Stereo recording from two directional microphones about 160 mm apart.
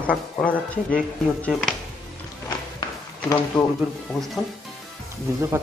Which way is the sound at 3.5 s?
5° left (ahead or behind).